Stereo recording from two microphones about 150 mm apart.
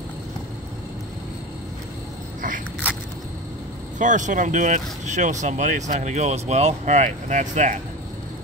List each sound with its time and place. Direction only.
4.0 s speech: 55° right (ahead or behind)